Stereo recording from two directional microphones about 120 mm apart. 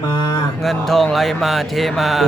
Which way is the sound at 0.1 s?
40° left (ahead or behind).